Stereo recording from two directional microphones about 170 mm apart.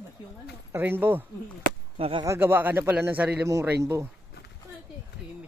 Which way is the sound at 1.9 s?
30° right (ahead or behind).